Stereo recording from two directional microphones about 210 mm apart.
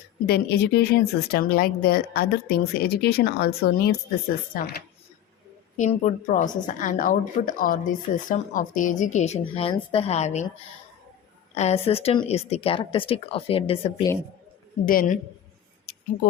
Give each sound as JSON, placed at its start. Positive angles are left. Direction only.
{"t": 0.3, "sound": "speech", "side_deg": 50}
{"t": 5.7, "sound": "a woman's voice", "side_deg": 35}
{"t": 11.5, "sound": "speech", "side_deg": 30}
{"t": 14.8, "sound": "a woman's voice", "side_deg": 40}
{"t": 15.9, "sound": "a sound", "side_deg": 40}